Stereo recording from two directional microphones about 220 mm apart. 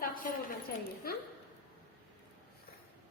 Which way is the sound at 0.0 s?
40° left (ahead or behind).